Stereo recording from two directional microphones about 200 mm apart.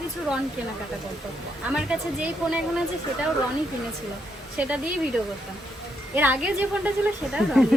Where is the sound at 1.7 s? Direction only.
5° right (ahead or behind).